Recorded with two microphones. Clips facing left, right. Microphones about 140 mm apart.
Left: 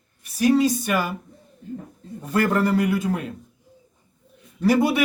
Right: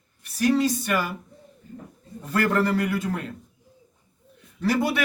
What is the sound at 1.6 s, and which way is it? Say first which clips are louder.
Speech: left 10 dB; 85° left.